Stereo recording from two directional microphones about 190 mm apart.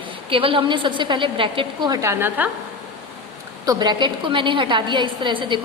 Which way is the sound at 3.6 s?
20° right (ahead or behind).